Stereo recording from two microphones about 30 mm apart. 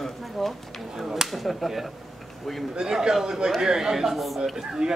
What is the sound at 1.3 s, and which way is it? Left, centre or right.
A man's voice, centre.